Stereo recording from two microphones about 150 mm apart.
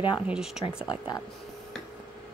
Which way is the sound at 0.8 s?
30° left (ahead or behind).